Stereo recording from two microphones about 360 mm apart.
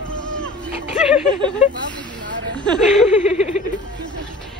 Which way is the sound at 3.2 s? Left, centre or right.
Centre.